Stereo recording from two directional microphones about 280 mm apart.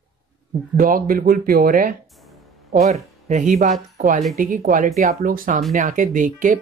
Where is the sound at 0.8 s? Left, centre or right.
Right.